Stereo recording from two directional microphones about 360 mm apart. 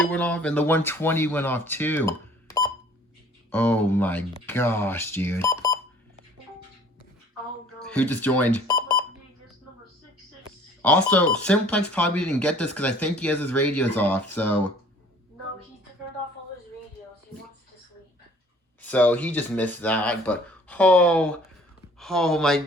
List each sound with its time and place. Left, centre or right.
0.0 s speech: centre
7.8 s speech: centre
10.8 s speech: centre
18.8 s speech: centre